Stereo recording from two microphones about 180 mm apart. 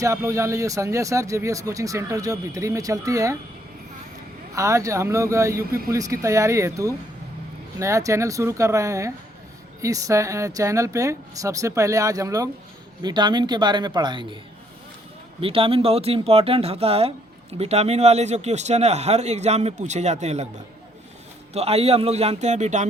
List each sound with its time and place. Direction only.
0.0 s speech: 15° right (ahead or behind)
4.5 s a man's voice: 15° right (ahead or behind)
15.4 s speech: 30° right (ahead or behind)
21.5 s speech: 35° right (ahead or behind)